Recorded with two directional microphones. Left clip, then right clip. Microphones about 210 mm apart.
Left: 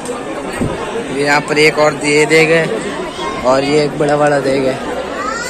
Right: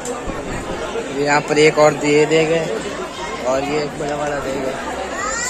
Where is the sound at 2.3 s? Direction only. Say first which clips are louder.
Left 6 dB; 15° right (ahead or behind).